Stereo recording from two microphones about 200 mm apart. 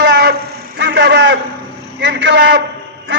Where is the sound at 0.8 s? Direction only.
60° right (ahead or behind).